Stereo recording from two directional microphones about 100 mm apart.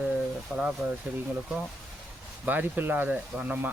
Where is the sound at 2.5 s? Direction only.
15° right (ahead or behind).